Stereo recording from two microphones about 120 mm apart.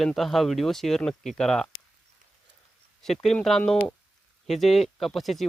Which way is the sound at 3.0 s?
5° left (ahead or behind).